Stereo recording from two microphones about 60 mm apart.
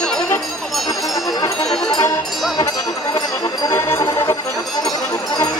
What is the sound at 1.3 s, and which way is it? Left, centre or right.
Music, left.